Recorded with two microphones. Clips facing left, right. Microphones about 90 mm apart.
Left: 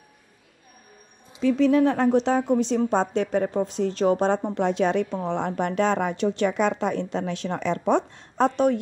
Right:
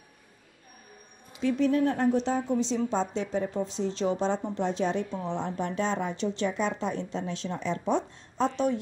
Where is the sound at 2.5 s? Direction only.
55° left (ahead or behind).